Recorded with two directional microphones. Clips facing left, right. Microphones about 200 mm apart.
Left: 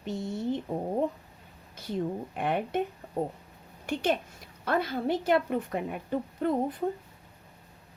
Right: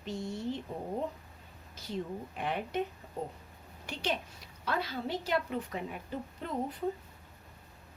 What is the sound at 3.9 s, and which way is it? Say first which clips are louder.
A woman's voice: left 7 dB; 50° left (ahead or behind).